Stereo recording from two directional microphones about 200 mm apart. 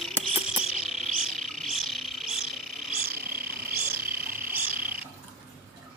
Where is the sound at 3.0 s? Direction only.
45° right (ahead or behind).